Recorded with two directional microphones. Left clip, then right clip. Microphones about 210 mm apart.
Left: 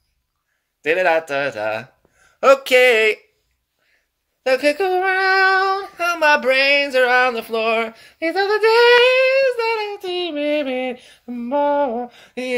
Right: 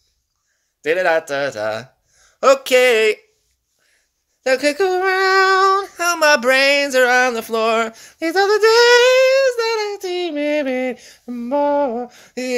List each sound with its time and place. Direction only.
0.8 s speech: 35° right (ahead or behind)
4.4 s female singing: 50° right (ahead or behind)